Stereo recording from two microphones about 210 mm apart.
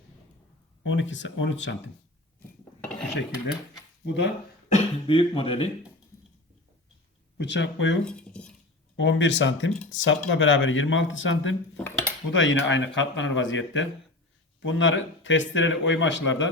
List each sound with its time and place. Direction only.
0.9 s speech: 65° left (ahead or behind)
4.0 s speech: 55° left (ahead or behind)
4.7 s speech: 25° left (ahead or behind)
7.3 s speech: 55° left (ahead or behind)
8.0 s speech: 5° left (ahead or behind)
9.0 s speech: 60° left (ahead or behind)
11.8 s cutlery: 10° left (ahead or behind)
12.3 s speech: 65° left (ahead or behind)